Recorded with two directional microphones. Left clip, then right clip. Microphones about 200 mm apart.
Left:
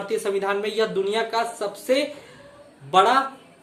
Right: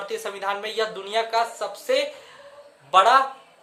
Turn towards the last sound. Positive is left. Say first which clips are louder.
# right 2 dB
turn(degrees=-25)  # may be behind; listen again after turning